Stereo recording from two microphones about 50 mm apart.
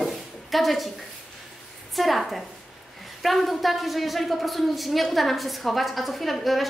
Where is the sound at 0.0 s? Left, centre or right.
Centre.